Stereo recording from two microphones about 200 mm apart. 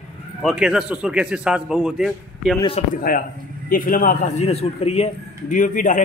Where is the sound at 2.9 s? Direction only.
45° left (ahead or behind).